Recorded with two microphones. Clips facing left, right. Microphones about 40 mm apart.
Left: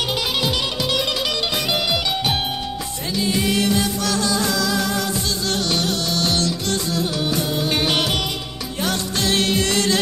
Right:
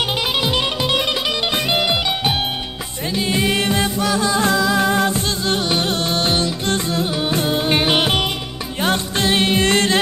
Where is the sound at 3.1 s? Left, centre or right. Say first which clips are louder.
Right 2 dB; right.